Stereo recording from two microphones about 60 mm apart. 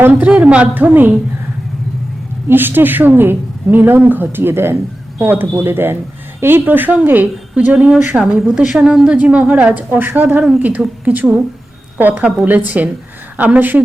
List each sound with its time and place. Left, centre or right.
0.1 s a woman's voice: right
0.7 s a woman's voice: right
2.5 s a woman's voice: right
7.5 s a woman's voice: right
8.2 s a woman's voice: centre; by 13.8 s right